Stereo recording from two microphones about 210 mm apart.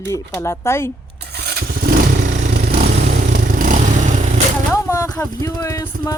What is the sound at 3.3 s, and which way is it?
Vehicle, 40° right (ahead or behind).